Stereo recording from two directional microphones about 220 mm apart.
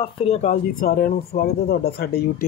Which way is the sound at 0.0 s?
25° left (ahead or behind).